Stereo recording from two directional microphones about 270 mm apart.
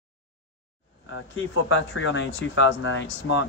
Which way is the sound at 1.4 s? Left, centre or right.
Left.